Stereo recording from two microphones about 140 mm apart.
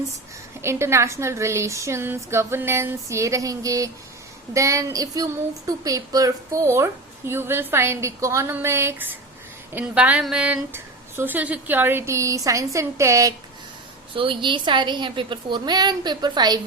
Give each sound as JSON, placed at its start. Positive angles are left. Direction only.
{"t": 0.6, "sound": "a woman's voice", "side_deg": -20}
{"t": 14.1, "sound": "a woman's voice", "side_deg": -40}